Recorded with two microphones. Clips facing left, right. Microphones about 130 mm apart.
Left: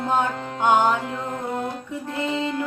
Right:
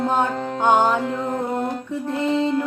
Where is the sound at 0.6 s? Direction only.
25° right (ahead or behind).